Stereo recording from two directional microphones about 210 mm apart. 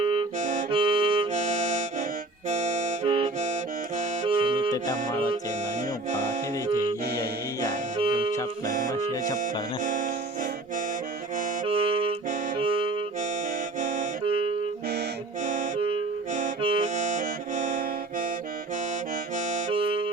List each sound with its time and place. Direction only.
0.0 s harmonica: 20° right (ahead or behind)
0.3 s harmonica: 35° right (ahead or behind)
2.5 s music: 35° right (ahead or behind)
4.7 s music: 15° left (ahead or behind)
7.9 s music: 25° right (ahead or behind)
8.9 s music: 15° left (ahead or behind)
9.4 s music: 35° right (ahead or behind)
11.6 s saxophone: 25° right (ahead or behind)
13.7 s music: 35° right (ahead or behind)
19.5 s music: 35° right (ahead or behind)